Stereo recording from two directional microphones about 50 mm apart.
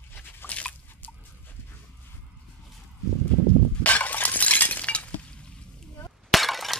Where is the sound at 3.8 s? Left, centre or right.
Left.